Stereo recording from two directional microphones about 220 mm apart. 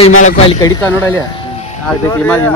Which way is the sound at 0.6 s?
10° left (ahead or behind).